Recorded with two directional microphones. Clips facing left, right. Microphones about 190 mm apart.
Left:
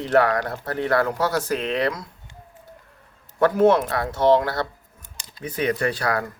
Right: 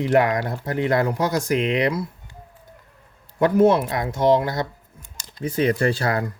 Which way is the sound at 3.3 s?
15° right (ahead or behind).